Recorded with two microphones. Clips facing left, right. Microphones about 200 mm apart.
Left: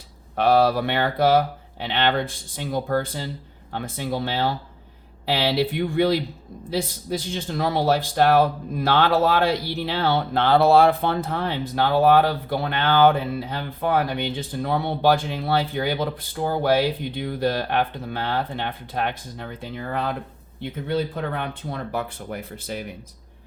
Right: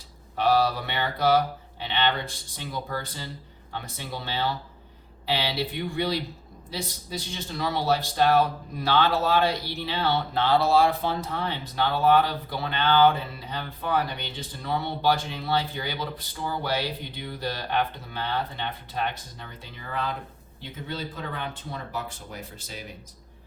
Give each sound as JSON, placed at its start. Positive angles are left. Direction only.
{"t": 0.3, "sound": "a man's voice", "side_deg": 55}